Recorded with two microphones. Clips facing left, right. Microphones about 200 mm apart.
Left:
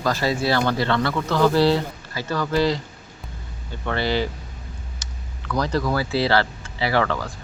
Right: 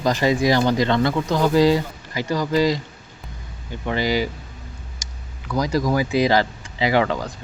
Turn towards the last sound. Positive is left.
turn(degrees=-20)  # may be behind; listen again after turning